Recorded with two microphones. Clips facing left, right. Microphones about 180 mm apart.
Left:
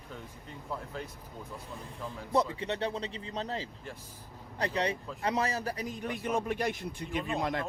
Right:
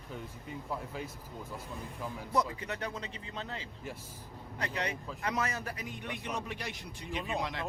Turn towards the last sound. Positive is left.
turn(degrees=0)  # may be behind; listen again after turning